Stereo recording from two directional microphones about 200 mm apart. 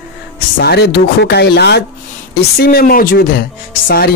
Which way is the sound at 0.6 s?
55° left (ahead or behind).